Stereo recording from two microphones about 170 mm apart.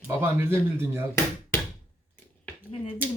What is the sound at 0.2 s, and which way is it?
Speech, 15° right (ahead or behind).